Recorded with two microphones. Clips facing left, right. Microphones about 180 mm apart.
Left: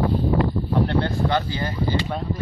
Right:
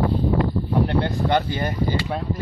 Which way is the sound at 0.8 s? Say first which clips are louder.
Right 1 dB; 20° right (ahead or behind).